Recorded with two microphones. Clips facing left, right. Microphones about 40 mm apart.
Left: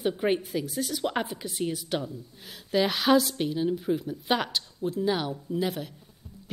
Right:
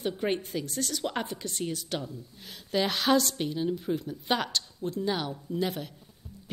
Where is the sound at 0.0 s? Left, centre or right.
Centre.